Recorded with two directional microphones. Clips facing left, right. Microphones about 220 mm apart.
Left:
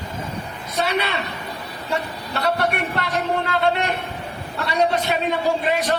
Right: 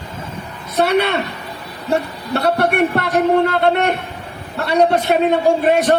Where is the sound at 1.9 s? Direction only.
60° right (ahead or behind).